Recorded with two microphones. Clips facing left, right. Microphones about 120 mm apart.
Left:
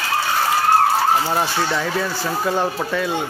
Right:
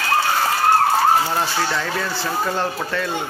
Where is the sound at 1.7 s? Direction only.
10° left (ahead or behind).